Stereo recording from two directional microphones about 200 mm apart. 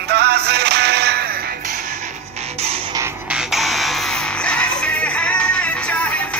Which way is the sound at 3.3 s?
Centre (ahead or behind).